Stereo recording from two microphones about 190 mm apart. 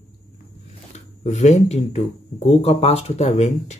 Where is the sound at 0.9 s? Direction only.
35° left (ahead or behind).